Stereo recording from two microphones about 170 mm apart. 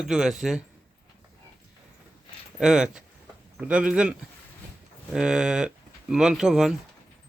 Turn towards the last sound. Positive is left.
turn(degrees=-5)  # may be behind; listen again after turning